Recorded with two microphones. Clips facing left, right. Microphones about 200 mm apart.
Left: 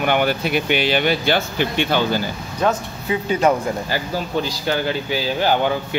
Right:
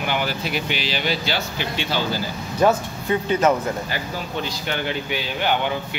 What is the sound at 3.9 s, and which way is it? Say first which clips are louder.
Speech: left 5 dB; 35° left (ahead or behind).